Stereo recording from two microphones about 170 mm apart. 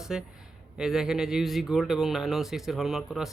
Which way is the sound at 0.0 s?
5° right (ahead or behind).